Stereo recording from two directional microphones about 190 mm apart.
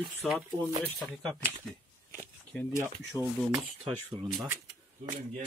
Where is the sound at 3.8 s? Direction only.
25° right (ahead or behind).